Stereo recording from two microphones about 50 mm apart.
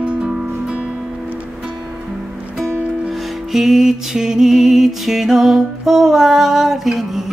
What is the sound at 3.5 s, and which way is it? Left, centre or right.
Music, centre.